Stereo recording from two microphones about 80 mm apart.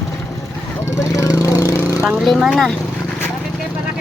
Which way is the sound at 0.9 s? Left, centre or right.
Left.